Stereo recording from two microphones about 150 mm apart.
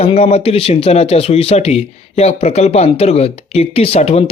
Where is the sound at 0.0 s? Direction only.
45° left (ahead or behind).